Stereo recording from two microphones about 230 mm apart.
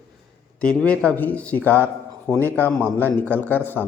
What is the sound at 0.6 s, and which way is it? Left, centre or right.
Speech, centre.